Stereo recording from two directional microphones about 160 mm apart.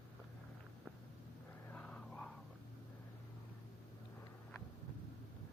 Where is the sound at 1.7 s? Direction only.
5° left (ahead or behind).